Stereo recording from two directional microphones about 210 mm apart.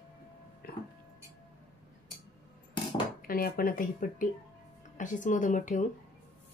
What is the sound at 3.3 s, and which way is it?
Speech, 45° left (ahead or behind).